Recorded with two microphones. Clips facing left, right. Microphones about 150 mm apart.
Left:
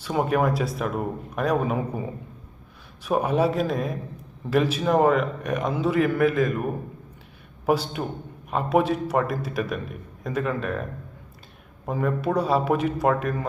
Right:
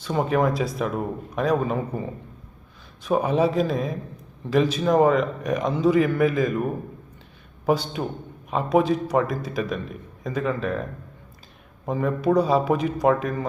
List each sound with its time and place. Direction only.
0.0 s a man's voice: 5° left (ahead or behind)
11.9 s a man's voice: 5° left (ahead or behind)